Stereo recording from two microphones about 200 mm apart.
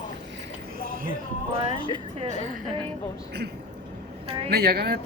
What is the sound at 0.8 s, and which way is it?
Music, 45° right (ahead or behind).